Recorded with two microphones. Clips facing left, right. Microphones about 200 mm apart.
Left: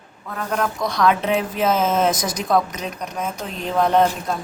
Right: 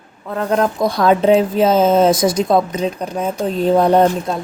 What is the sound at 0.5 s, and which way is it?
Speech, 35° right (ahead or behind).